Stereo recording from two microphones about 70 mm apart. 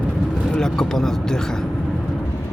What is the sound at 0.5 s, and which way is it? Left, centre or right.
Speech, centre.